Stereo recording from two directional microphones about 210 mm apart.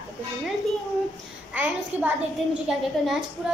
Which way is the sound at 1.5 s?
5° right (ahead or behind).